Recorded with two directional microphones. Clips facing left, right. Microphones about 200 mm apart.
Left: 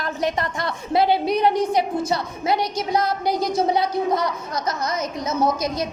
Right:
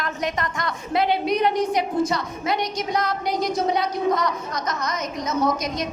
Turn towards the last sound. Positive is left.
turn(degrees=30)  # may be behind; listen again after turning